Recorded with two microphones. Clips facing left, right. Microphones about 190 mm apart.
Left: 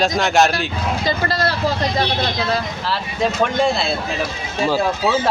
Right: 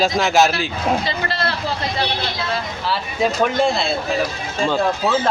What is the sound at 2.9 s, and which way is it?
Speech, centre (ahead or behind).